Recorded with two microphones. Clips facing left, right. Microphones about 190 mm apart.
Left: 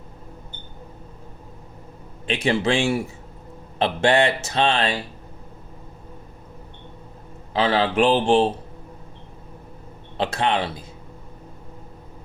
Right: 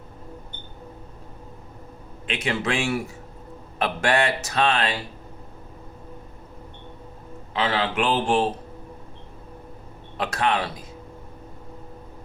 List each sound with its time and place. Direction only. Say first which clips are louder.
2.2 s speech: left 5 dB; 30° left (ahead or behind)
7.5 s speech: left 4 dB; 35° left (ahead or behind)
10.2 s speech: left 2 dB; 25° left (ahead or behind)